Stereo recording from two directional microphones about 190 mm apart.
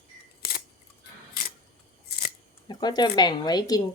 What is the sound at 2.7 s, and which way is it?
Speech, 20° left (ahead or behind).